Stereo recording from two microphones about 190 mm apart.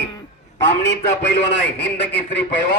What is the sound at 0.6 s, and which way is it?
A man's voice, 65° left (ahead or behind).